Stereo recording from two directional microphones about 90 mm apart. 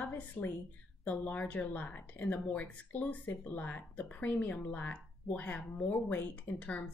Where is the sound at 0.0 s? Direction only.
20° left (ahead or behind).